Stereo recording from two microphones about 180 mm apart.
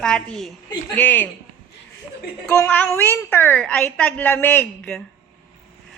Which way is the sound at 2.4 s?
5° left (ahead or behind).